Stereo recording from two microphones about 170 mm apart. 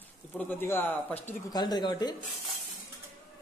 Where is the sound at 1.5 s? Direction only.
25° left (ahead or behind).